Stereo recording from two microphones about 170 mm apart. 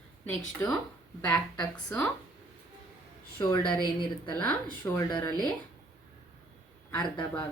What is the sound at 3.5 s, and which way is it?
Speech, 5° left (ahead or behind).